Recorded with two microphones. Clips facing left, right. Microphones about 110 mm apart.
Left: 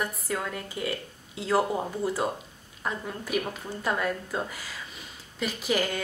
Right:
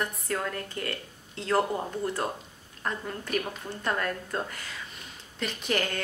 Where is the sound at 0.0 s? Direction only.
5° left (ahead or behind).